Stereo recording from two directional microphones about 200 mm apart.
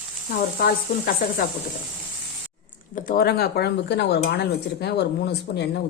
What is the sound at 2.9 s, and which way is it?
Speech, 45° left (ahead or behind).